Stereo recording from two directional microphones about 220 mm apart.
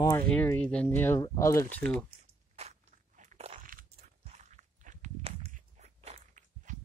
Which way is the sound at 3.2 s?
30° right (ahead or behind).